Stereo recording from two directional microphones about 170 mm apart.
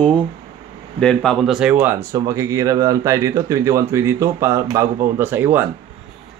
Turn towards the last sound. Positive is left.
turn(degrees=-10)  # may be behind; listen again after turning